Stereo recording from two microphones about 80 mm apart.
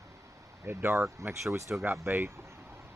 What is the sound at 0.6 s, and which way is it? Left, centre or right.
Speech, right.